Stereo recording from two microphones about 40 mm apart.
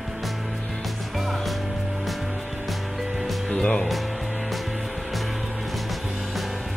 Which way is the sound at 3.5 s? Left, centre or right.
Left.